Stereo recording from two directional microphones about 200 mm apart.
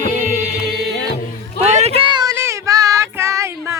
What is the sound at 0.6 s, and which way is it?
Music, 55° right (ahead or behind).